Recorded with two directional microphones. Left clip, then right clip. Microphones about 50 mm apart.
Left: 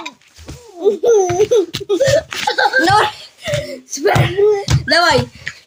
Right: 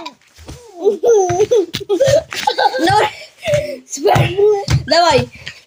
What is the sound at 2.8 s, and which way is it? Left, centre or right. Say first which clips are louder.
Chuckle: left 1 dB; left.